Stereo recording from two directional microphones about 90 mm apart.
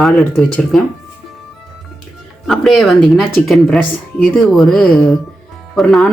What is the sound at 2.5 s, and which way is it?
Speech, centre (ahead or behind).